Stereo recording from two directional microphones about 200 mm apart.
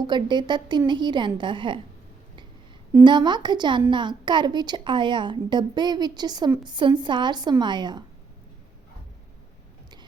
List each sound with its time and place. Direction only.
0.1 s a woman's voice: 20° right (ahead or behind)
3.0 s a woman's voice: 20° right (ahead or behind)